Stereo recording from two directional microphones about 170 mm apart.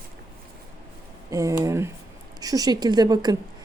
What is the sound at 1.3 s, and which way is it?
A woman's voice, 20° right (ahead or behind).